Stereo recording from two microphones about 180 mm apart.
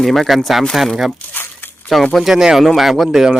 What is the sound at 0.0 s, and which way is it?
Speech, centre (ahead or behind).